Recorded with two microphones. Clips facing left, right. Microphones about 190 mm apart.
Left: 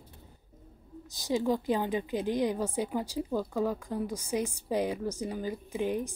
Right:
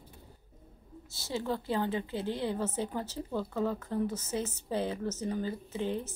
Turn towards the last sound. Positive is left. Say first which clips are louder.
# left 3 dB
turn(degrees=15)  # may be behind; listen again after turning